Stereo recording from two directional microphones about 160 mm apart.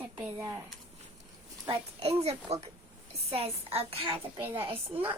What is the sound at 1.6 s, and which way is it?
A child's voice, 35° right (ahead or behind).